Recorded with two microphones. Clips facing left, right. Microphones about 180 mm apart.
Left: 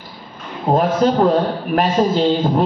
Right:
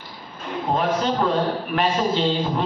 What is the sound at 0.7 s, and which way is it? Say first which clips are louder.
A man's voice: left 7 dB; 40° left (ahead or behind).